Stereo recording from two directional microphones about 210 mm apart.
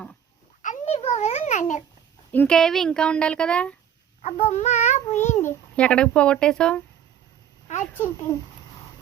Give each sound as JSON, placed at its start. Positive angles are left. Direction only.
{"t": 0.6, "sound": "a sound", "side_deg": 35}
{"t": 2.3, "sound": "a woman's voice", "side_deg": 5}
{"t": 4.2, "sound": "a child's voice", "side_deg": 30}
{"t": 5.4, "sound": "a woman's voice", "side_deg": 10}
{"t": 7.9, "sound": "speech", "side_deg": 10}